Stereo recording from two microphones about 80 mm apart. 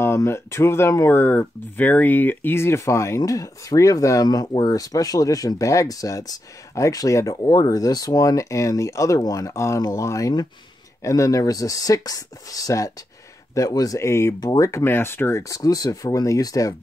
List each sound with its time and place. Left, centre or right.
0.0 s speech: left